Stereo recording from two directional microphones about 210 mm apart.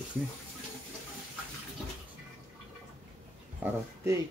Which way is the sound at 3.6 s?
15° right (ahead or behind).